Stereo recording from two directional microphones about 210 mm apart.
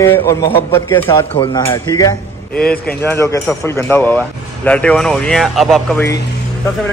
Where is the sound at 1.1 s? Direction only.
25° left (ahead or behind); by 6.0 s centre (ahead or behind).